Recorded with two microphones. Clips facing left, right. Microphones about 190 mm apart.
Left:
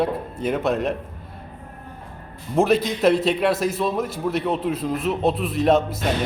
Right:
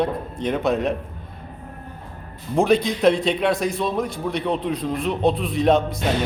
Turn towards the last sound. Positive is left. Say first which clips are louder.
# even
turn(degrees=5)  # may be behind; listen again after turning